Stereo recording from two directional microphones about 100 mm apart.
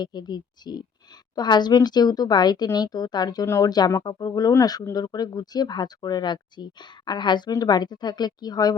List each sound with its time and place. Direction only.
0.0 s speech: 45° left (ahead or behind)
3.4 s speech: 25° left (ahead or behind)
3.7 s speech: 40° left (ahead or behind)